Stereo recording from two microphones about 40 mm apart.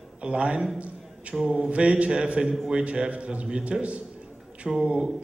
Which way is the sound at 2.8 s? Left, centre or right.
Right.